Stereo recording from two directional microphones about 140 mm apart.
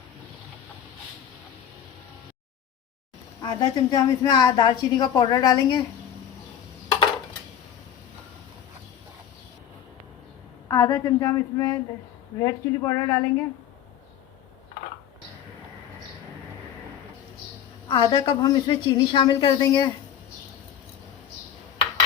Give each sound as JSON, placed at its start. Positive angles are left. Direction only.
{"t": 3.4, "sound": "a woman's voice", "side_deg": 30}
{"t": 10.7, "sound": "a woman's voice", "side_deg": 25}
{"t": 17.8, "sound": "a woman's voice", "side_deg": 30}